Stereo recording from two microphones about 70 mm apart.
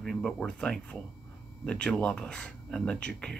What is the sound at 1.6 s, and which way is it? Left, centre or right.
Speech, centre.